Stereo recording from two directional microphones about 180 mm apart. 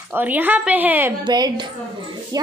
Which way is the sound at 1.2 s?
25° right (ahead or behind).